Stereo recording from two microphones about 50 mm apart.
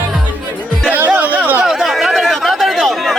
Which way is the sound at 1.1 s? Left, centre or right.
Right.